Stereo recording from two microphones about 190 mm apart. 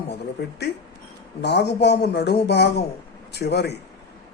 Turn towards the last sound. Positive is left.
turn(degrees=60)  # may be behind; listen again after turning